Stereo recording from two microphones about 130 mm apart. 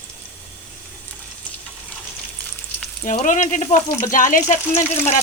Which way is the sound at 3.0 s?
80° left.